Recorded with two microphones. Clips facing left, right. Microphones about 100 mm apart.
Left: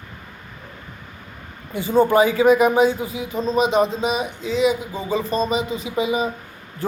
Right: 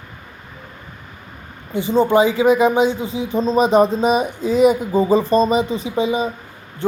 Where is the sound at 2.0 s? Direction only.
20° right (ahead or behind).